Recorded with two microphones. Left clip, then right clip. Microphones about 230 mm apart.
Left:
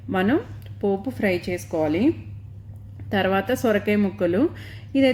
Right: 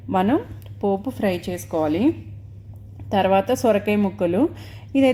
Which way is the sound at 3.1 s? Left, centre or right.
Centre.